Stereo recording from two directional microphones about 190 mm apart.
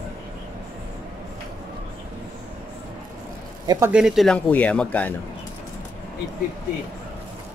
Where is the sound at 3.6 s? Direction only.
15° right (ahead or behind).